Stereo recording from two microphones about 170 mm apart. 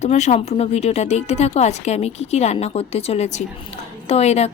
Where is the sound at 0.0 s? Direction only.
40° left (ahead or behind).